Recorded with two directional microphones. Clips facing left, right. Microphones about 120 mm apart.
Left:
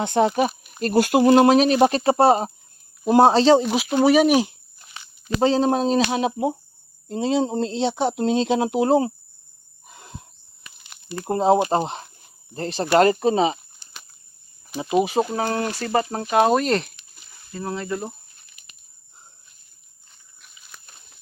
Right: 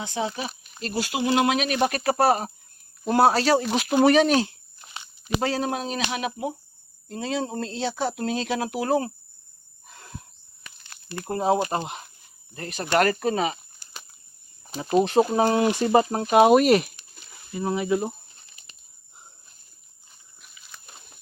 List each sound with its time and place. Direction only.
0.0 s speech: 60° left (ahead or behind); by 3.7 s 20° left (ahead or behind)
3.7 s speech: 5° left (ahead or behind)
5.4 s speech: 25° left (ahead or behind)
9.8 s wild animals: 20° left (ahead or behind)
11.3 s speech: 25° left (ahead or behind)
14.9 s speech: centre (ahead or behind)
15.4 s speech: 15° right (ahead or behind)
18.4 s bird: 30° right (ahead or behind)